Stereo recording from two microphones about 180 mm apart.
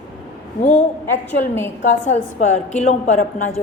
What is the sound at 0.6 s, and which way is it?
A woman's voice, 40° left (ahead or behind).